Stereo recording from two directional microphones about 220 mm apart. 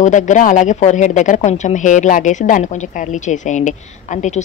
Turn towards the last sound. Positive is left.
turn(degrees=35)  # may be behind; listen again after turning